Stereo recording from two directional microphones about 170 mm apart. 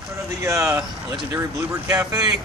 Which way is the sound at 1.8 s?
20° right (ahead or behind).